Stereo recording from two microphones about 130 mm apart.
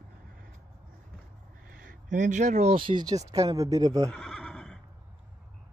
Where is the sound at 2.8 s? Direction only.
35° right (ahead or behind).